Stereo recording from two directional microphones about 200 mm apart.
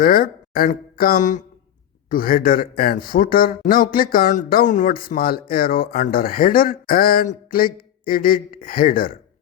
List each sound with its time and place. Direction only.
0.0 s speech: 45° left (ahead or behind)